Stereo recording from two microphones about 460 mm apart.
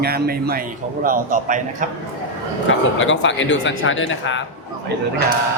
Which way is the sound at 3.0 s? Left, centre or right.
Left.